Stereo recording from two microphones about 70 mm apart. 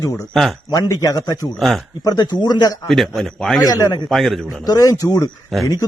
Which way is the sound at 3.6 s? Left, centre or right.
Left.